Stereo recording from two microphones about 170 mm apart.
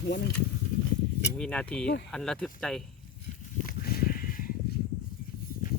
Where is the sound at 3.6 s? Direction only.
65° left (ahead or behind).